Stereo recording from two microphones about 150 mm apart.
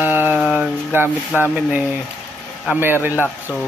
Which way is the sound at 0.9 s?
15° right (ahead or behind).